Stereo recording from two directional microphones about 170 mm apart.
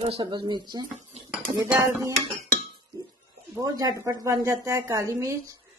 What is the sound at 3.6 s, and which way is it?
Speech, 20° right (ahead or behind).